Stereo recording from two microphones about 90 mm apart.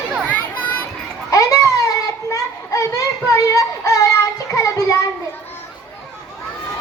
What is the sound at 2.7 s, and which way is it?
Music, 35° left (ahead or behind).